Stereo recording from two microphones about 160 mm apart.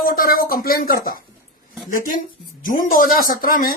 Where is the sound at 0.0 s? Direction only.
60° left (ahead or behind).